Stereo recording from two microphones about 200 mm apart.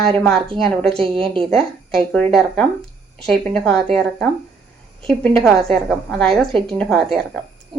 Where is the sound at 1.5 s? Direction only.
5° left (ahead or behind).